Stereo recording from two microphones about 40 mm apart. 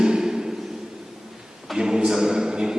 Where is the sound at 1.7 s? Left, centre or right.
Centre.